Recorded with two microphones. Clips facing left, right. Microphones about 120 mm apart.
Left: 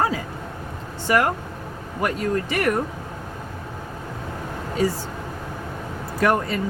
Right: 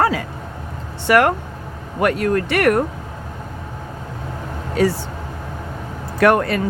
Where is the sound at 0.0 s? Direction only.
70° right (ahead or behind).